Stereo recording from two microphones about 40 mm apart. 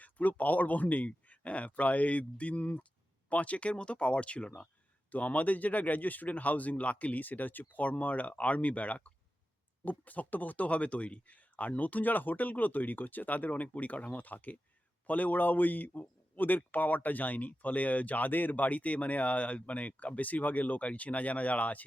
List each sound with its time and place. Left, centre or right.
0.0 s speech: left
5.1 s speech: left